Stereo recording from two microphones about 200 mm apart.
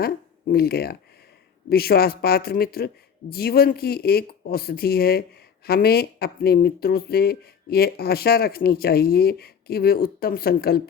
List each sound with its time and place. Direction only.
0.0 s speech: 50° left (ahead or behind)